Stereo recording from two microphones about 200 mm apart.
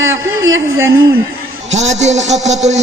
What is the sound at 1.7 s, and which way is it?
Speech, 35° right (ahead or behind).